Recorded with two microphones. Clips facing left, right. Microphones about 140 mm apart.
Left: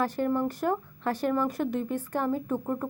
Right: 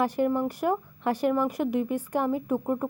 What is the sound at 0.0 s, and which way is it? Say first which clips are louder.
A woman's voice: right 2 dB; 15° right (ahead or behind).